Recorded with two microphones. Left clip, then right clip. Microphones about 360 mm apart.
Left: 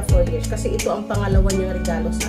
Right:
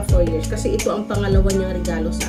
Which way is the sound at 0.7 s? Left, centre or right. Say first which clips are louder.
Right 1 dB; centre.